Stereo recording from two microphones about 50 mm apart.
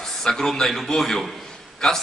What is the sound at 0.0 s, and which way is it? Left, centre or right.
A man's voice, centre.